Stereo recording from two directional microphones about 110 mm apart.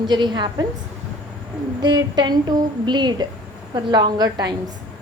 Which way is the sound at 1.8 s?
40° right (ahead or behind).